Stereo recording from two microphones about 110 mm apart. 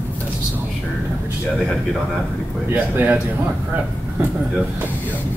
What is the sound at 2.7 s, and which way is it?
Speech, 15° right (ahead or behind).